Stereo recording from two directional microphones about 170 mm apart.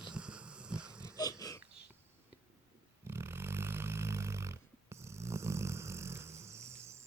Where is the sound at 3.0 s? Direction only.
15° right (ahead or behind).